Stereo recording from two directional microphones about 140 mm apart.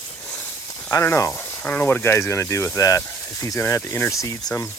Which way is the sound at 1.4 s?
10° left (ahead or behind).